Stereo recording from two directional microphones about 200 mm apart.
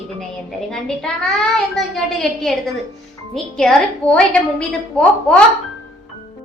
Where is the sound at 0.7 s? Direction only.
5° left (ahead or behind).